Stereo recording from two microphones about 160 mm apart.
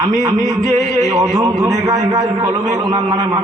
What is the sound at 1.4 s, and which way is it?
A man's voice, 20° right (ahead or behind).